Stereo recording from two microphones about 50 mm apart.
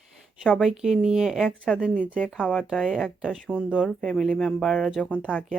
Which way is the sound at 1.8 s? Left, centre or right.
Left.